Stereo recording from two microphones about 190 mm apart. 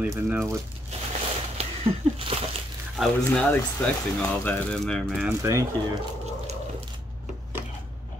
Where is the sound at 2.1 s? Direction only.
30° right (ahead or behind).